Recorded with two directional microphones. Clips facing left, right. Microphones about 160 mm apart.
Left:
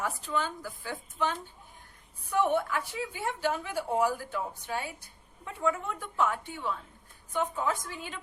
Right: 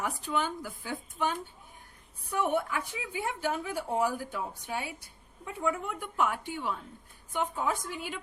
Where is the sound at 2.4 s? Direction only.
10° right (ahead or behind).